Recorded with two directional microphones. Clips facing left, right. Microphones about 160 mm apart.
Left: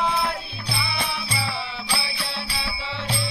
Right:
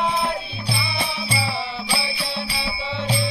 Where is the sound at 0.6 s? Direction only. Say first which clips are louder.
Right 1 dB; 25° right (ahead or behind).